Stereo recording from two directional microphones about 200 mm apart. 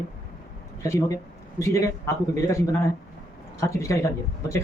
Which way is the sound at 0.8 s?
15° left (ahead or behind).